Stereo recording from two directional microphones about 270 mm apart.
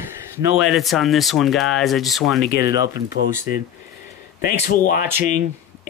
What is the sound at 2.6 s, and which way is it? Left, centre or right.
Speech, centre.